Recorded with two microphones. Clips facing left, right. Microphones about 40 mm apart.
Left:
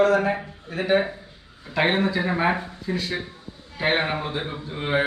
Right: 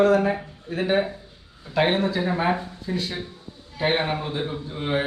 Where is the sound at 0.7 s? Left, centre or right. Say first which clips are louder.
Left 1 dB; centre.